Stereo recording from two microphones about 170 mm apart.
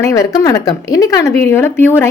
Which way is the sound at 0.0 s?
20° left (ahead or behind).